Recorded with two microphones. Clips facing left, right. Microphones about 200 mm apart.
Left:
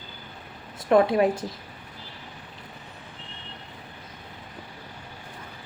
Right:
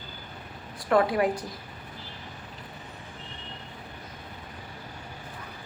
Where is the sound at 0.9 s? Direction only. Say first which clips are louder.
Left 4 dB; 25° left (ahead or behind).